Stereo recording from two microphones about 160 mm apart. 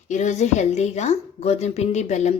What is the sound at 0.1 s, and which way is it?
A woman's voice, 50° left (ahead or behind).